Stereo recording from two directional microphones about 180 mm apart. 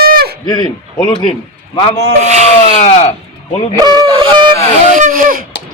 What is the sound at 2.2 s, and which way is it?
Speech, 40° right (ahead or behind).